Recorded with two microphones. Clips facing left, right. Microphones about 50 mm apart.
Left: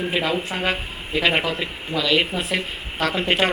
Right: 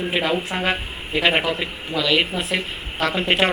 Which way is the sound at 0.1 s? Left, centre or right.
Centre.